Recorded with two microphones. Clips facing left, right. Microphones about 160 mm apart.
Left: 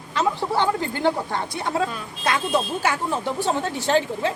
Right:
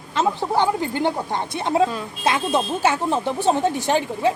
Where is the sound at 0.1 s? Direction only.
20° right (ahead or behind).